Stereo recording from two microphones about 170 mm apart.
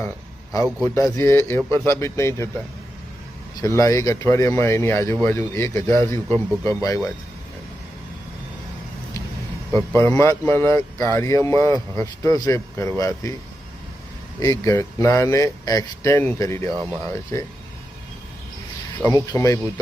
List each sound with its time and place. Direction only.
0.9 s speech: 20° left (ahead or behind)
3.6 s speech: 20° left (ahead or behind)
9.7 s speech: 15° left (ahead or behind)
14.3 s speech: 20° left (ahead or behind)
19.0 s speech: 20° left (ahead or behind)